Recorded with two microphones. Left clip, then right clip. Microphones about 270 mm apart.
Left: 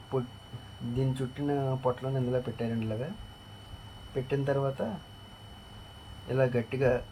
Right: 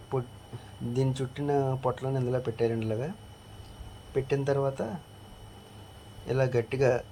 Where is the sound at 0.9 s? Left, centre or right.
Centre.